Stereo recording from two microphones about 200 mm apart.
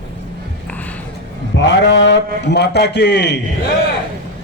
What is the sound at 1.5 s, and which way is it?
A man's voice, 60° left (ahead or behind).